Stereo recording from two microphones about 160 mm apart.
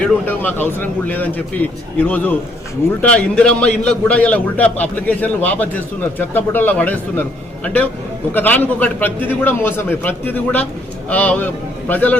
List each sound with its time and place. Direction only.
0.0 s a man's voice: 10° left (ahead or behind)